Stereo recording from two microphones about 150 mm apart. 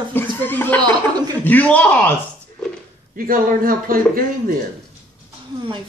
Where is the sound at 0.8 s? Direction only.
30° right (ahead or behind).